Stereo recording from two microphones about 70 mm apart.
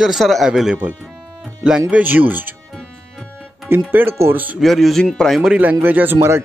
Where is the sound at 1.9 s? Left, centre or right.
Right.